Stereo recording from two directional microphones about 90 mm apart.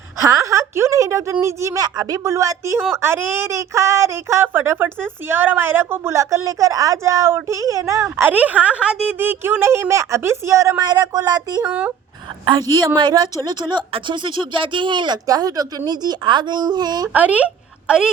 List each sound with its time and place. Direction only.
0.2 s a woman's voice: 40° right (ahead or behind)
6.1 s a woman's voice: 35° right (ahead or behind)
8.1 s a woman's voice: 20° right (ahead or behind); by 10.8 s 35° right (ahead or behind)
10.8 s speech: 45° right (ahead or behind)
11.6 s speech: 15° right (ahead or behind)
13.0 s speech: 50° right (ahead or behind)
17.1 s a woman's voice: 15° right (ahead or behind)